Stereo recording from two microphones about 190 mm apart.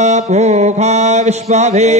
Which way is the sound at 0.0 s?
35° right (ahead or behind).